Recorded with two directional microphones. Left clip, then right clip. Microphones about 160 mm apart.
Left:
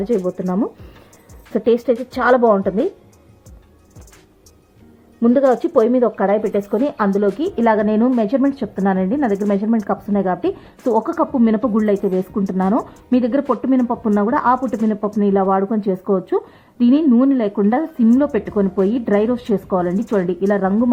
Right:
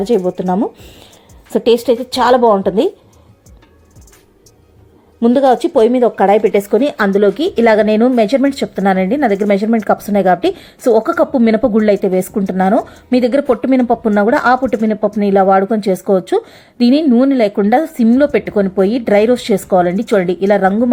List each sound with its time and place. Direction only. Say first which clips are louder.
0.0 s a woman's voice: right 5 dB; centre (ahead or behind)
5.2 s a woman's voice: right 4 dB; 5° right (ahead or behind)
6.1 s speech: right 7 dB; 20° right (ahead or behind)
11.5 s a woman's voice: right 6 dB; 25° right (ahead or behind)